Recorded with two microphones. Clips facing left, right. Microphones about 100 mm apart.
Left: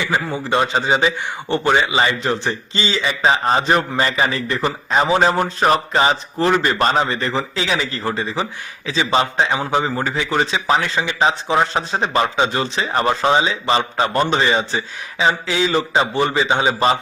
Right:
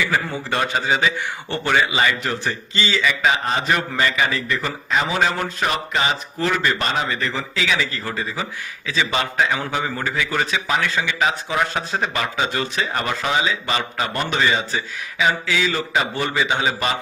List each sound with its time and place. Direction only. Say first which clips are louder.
0.0 s a man's voice: left 1 dB; 20° left (ahead or behind)